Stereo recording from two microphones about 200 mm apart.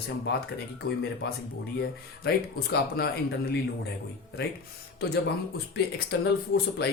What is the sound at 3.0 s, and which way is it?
Speech, 50° left (ahead or behind).